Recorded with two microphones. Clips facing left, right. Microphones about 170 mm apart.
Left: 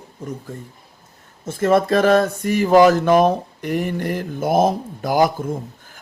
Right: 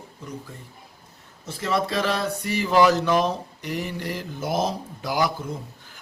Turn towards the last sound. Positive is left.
turn(degrees=50)  # may be behind; listen again after turning